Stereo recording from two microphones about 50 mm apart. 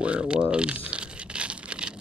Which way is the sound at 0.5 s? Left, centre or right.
Right.